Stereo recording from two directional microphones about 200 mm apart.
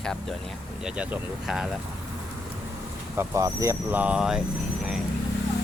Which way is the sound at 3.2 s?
15° right (ahead or behind).